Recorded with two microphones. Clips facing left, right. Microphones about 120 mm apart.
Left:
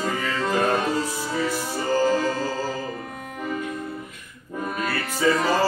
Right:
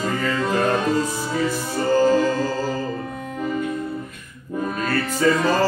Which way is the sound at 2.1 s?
50° right (ahead or behind).